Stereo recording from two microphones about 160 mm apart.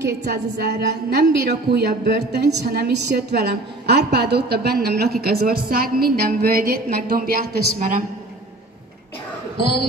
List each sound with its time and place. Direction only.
0.0 s a woman's voice: 90° right; by 8.0 s 60° right (ahead or behind)